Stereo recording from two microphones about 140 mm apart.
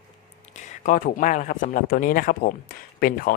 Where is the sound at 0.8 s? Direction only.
75° left (ahead or behind).